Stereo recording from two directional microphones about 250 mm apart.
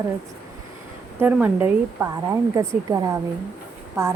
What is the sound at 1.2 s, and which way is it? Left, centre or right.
Speech, centre.